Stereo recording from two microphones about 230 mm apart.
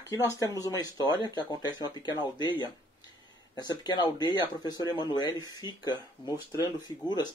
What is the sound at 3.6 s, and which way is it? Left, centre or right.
Speech, centre.